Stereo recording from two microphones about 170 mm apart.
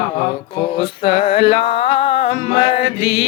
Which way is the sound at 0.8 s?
30° left (ahead or behind).